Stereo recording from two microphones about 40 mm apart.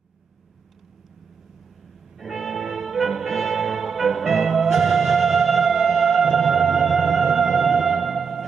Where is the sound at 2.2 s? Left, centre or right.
Centre.